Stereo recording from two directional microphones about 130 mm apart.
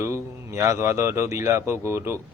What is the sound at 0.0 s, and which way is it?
A man's voice, 20° right (ahead or behind).